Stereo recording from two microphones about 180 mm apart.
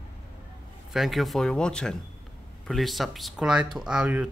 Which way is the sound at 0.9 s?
Centre (ahead or behind).